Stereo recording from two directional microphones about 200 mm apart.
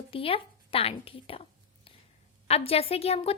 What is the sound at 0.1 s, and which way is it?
A woman's voice, 25° left (ahead or behind).